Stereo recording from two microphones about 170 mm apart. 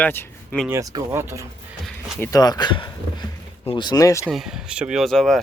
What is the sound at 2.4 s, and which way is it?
Speech, 25° left (ahead or behind).